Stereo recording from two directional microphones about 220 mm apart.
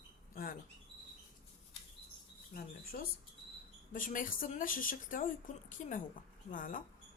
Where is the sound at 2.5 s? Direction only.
40° left (ahead or behind).